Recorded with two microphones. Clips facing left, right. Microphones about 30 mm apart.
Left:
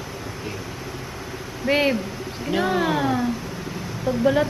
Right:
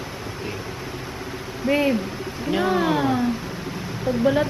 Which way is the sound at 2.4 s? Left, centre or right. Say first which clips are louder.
Right 1 dB; centre.